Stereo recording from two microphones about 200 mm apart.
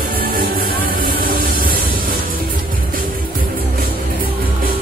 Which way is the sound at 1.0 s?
45° right (ahead or behind).